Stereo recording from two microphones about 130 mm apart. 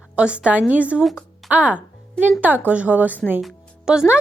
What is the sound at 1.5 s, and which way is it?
A woman's voice, 10° right (ahead or behind).